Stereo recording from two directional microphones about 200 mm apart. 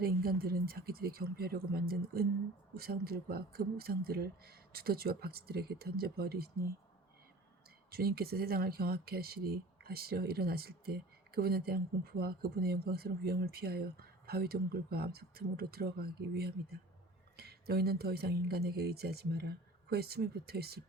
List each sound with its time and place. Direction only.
0.0 s speech: 50° right (ahead or behind)
7.9 s speech: 50° right (ahead or behind)